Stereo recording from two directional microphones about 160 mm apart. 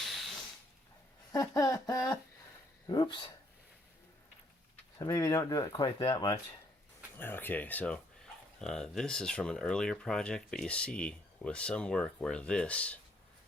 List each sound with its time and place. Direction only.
0.0 s a sound: centre (ahead or behind)
1.3 s speech: 20° left (ahead or behind)
4.9 s speech: 20° left (ahead or behind)
7.2 s speech: 10° left (ahead or behind)